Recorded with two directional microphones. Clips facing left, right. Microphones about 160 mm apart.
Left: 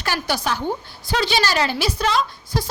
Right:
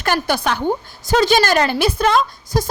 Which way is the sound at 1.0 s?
45° right (ahead or behind).